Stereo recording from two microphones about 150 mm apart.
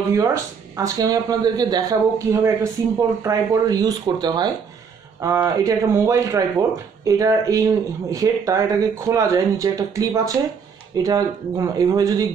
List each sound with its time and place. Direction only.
0.1 s speech: 20° right (ahead or behind)